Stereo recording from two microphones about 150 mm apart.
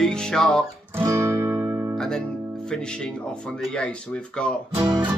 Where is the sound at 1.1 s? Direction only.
20° right (ahead or behind).